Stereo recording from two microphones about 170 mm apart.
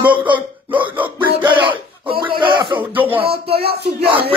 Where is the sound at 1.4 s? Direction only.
30° right (ahead or behind).